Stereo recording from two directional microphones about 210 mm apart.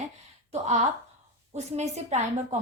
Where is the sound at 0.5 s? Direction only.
30° right (ahead or behind).